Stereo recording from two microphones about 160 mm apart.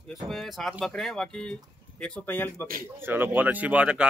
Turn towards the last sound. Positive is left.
turn(degrees=-5)  # may be behind; listen again after turning